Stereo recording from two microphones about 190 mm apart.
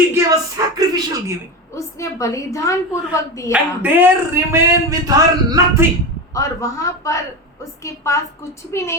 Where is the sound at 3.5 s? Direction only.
10° right (ahead or behind).